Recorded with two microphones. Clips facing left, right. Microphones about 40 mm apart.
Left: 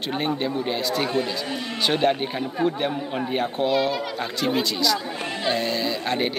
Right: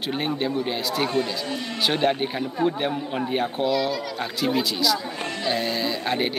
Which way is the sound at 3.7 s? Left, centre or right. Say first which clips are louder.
Left 3 dB; left.